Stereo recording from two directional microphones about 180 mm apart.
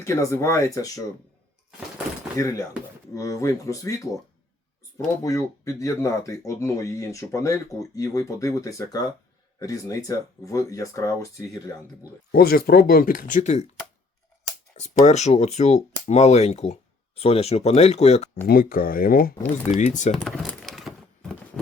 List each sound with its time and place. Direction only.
0.0 s speech: 15° left (ahead or behind)
2.3 s speech: 15° left (ahead or behind)
12.3 s speech: 60° left (ahead or behind); by 13.7 s 40° left (ahead or behind)
14.8 s speech: 40° left (ahead or behind)
18.4 s speech: 55° left (ahead or behind)
19.7 s speech: 40° left (ahead or behind)
20.1 s a sound: 5° left (ahead or behind)